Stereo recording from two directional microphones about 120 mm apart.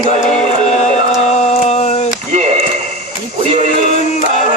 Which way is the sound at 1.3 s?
70° left (ahead or behind).